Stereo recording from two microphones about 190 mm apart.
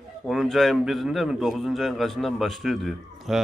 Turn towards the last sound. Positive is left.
turn(degrees=0)  # may be behind; listen again after turning